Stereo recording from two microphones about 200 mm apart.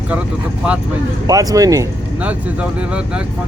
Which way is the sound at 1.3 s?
15° right (ahead or behind).